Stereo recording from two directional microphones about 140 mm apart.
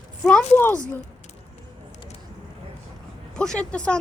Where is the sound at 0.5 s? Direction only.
15° left (ahead or behind).